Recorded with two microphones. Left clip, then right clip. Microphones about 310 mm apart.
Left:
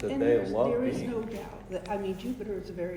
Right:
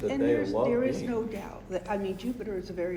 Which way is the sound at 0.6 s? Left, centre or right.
Right.